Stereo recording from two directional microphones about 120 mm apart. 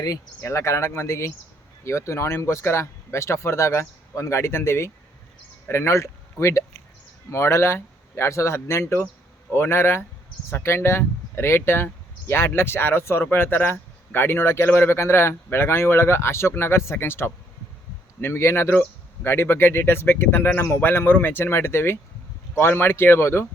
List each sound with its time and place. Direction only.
0.0 s speech: 30° left (ahead or behind)